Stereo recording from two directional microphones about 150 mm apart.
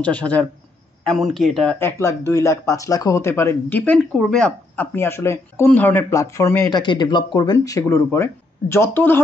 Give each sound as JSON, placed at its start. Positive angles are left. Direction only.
{"t": 0.0, "sound": "speech", "side_deg": 10}
{"t": 1.8, "sound": "speech", "side_deg": 20}
{"t": 4.9, "sound": "speech", "side_deg": 15}
{"t": 6.8, "sound": "speech", "side_deg": 30}